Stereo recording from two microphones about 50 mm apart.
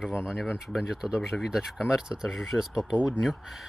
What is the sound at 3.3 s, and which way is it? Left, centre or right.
Speech, centre.